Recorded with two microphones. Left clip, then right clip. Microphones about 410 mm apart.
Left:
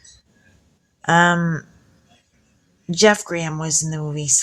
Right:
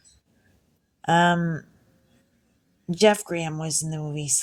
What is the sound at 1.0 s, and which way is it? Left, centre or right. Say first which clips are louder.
Speech: left 5 dB; right.